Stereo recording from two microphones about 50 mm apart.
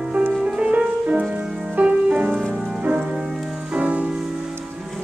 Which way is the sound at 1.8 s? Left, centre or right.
Right.